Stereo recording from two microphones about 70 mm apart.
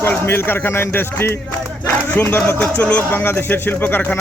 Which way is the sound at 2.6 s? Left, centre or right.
Centre.